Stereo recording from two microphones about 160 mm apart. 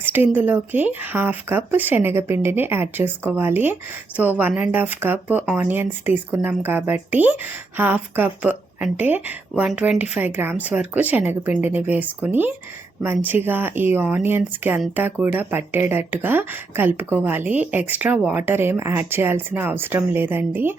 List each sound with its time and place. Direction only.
0.0 s speech: 15° right (ahead or behind)